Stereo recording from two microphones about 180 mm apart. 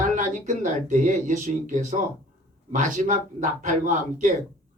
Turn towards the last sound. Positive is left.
turn(degrees=-45)  # may be behind; listen again after turning